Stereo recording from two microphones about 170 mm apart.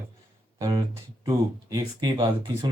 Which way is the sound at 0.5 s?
25° right (ahead or behind).